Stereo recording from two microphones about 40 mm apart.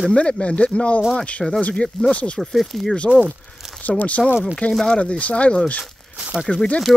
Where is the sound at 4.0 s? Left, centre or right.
Left.